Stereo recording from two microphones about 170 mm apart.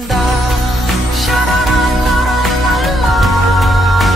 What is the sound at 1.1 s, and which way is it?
Music, centre (ahead or behind).